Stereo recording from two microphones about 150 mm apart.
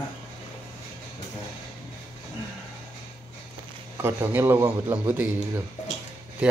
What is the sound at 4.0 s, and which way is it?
A man's voice, 15° right (ahead or behind).